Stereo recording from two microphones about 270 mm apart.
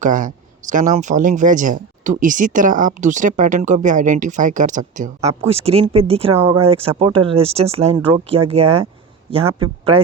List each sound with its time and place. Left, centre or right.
0.0 s a woman's voice: right
6.3 s speech: centre
6.6 s a woman's voice: right